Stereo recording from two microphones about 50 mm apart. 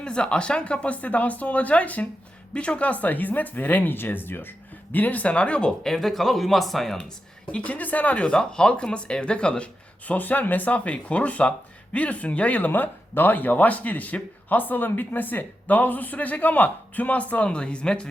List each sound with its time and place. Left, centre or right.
0.0 s speech: centre
5.8 s speech: centre
7.4 s speech: left
8.2 s speech: centre
10.1 s speech: left; by 18.1 s centre